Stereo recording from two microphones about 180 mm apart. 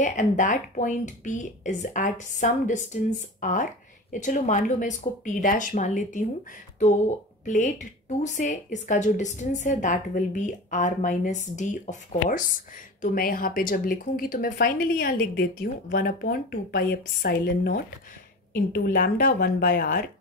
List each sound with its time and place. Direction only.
0.0 s a woman's voice: 45° left (ahead or behind)